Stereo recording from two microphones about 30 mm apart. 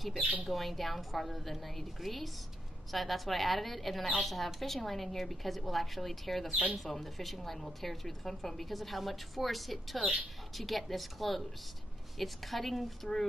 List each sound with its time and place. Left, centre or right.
0.2 s speech: right
0.5 s a woman's voice: centre